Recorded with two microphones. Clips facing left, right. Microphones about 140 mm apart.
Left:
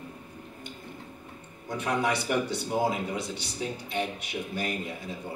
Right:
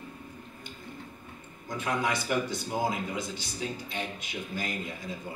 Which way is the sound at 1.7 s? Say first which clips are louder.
Left 2 dB; 65° left (ahead or behind).